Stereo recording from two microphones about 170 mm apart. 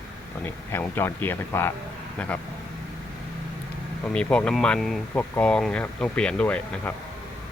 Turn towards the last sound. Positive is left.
turn(degrees=5)  # may be behind; listen again after turning